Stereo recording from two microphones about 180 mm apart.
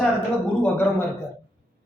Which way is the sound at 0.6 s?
10° left (ahead or behind).